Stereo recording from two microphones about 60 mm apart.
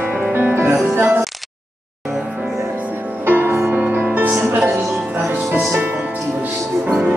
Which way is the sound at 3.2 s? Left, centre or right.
Right.